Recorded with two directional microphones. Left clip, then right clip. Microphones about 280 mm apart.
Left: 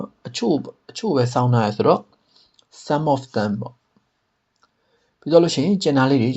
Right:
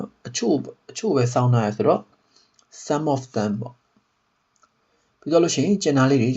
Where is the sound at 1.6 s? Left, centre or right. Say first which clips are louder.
Left 3 dB; left.